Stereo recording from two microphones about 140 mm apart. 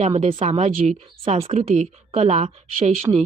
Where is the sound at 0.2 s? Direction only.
45° right (ahead or behind).